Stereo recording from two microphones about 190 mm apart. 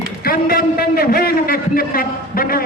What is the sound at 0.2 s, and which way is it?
A man's voice, 50° left (ahead or behind).